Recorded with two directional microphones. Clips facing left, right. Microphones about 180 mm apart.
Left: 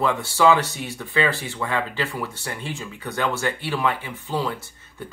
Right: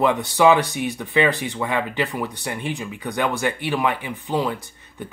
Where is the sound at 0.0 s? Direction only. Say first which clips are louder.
Right 2 dB; 20° right (ahead or behind).